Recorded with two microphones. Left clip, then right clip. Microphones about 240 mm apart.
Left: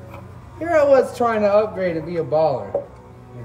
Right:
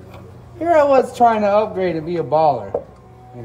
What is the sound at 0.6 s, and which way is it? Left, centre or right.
A man's voice, centre.